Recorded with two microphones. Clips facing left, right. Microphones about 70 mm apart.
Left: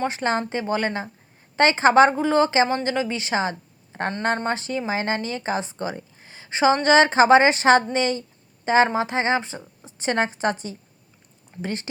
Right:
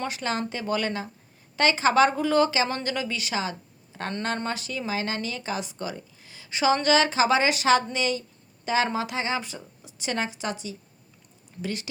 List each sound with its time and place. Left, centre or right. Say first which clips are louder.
0.0 s a woman's voice: left 5 dB; left
3.9 s a sound: left 7 dB; left
4.4 s speech: left 5 dB; left